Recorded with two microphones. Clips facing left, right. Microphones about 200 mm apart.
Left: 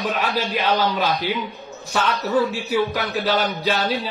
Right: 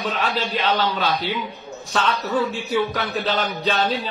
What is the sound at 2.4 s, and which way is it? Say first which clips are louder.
Speech: left 1 dB; 15° right (ahead or behind).